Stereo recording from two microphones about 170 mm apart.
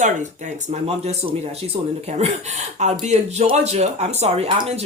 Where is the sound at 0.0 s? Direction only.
45° right (ahead or behind).